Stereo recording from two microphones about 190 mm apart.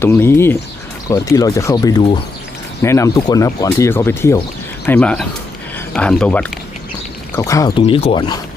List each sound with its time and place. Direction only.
0.0 s speech: 15° left (ahead or behind)
7.8 s speech: 30° left (ahead or behind)